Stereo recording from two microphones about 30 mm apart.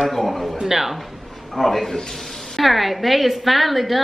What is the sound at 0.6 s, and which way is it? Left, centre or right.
Speech, centre.